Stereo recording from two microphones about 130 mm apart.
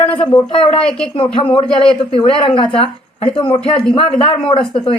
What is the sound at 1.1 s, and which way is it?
Speech, 40° left (ahead or behind).